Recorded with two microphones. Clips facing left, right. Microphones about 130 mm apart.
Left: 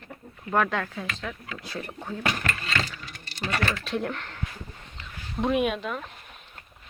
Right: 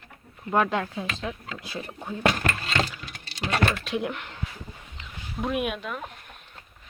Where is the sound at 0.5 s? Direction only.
20° right (ahead or behind).